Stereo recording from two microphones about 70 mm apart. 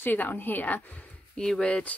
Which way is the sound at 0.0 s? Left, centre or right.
Left.